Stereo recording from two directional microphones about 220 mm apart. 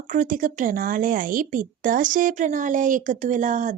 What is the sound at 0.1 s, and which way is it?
A woman's voice, 35° right (ahead or behind).